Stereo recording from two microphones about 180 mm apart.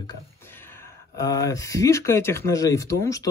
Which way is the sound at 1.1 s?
20° left (ahead or behind).